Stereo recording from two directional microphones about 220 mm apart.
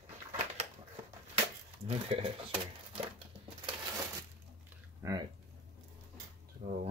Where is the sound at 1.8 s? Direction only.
25° right (ahead or behind).